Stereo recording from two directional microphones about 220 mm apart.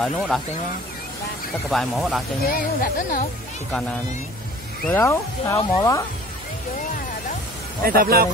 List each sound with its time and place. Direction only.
0.0 s speech: centre (ahead or behind)
1.7 s speech: centre (ahead or behind)
2.4 s speech: 40° left (ahead or behind)
4.8 s speech: 10° left (ahead or behind)
7.8 s speech: 40° right (ahead or behind)